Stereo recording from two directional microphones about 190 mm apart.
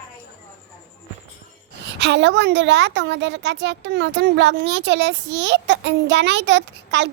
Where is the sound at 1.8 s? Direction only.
65° right (ahead or behind).